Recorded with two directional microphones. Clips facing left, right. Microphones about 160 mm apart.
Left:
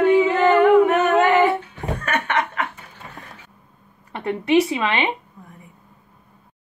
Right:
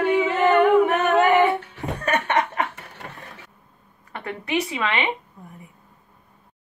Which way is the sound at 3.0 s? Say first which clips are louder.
Even; 60° right (ahead or behind).